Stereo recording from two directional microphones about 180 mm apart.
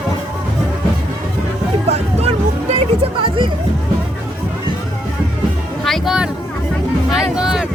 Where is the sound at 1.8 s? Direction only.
35° right (ahead or behind).